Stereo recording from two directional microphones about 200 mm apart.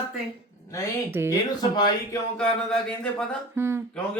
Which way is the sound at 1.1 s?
10° right (ahead or behind).